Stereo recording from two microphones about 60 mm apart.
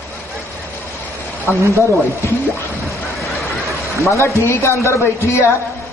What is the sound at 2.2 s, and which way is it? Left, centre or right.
Speech, left.